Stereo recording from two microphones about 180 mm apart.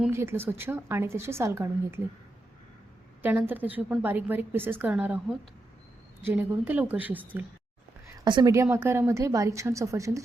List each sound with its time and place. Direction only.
0.1 s a woman's voice: 15° right (ahead or behind)
3.2 s a woman's voice: 10° right (ahead or behind)
8.2 s a woman's voice: 25° right (ahead or behind)